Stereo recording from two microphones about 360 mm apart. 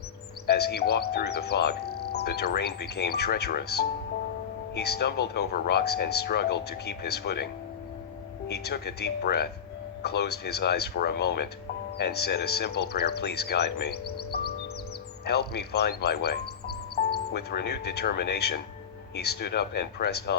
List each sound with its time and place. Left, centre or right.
0.4 s speech: left
14.3 s music: left
15.2 s speech: left